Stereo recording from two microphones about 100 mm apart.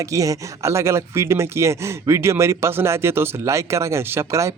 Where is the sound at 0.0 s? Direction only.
35° right (ahead or behind).